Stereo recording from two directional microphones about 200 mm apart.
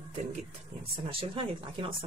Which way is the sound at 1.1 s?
25° right (ahead or behind).